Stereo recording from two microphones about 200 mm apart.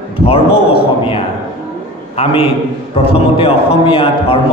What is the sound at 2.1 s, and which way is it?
A man's voice, 30° left (ahead or behind).